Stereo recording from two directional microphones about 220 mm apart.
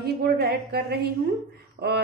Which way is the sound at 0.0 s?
45° right (ahead or behind).